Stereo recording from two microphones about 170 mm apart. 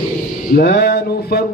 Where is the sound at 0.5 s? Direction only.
65° left (ahead or behind).